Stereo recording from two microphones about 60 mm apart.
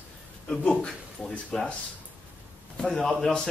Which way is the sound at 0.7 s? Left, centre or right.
Centre.